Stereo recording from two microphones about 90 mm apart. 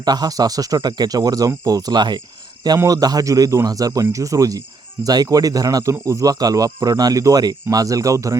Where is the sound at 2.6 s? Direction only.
40° right (ahead or behind).